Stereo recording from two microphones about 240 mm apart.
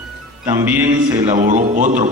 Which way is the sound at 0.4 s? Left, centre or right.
Centre.